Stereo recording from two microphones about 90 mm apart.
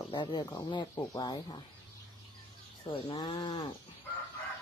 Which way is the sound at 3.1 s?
55° left (ahead or behind).